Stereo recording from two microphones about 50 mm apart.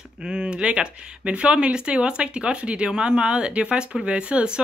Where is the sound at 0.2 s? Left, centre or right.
Centre.